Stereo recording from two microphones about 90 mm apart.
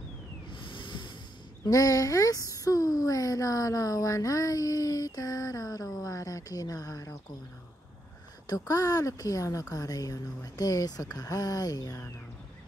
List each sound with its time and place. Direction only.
0.5 s a sound: 65° left (ahead or behind)
1.7 s speech: 40° left (ahead or behind)
8.5 s speech: 45° left (ahead or behind)